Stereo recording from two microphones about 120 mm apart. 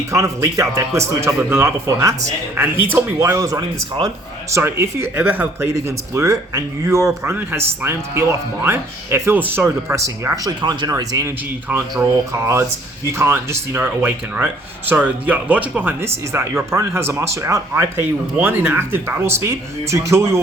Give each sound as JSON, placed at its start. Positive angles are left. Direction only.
{"t": 0.1, "sound": "speech", "side_deg": -25}
{"t": 5.7, "sound": "speech", "side_deg": -25}
{"t": 11.7, "sound": "speech", "side_deg": -20}